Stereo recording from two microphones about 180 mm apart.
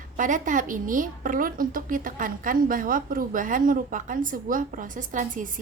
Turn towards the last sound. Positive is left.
turn(degrees=-45)  # may be behind; listen again after turning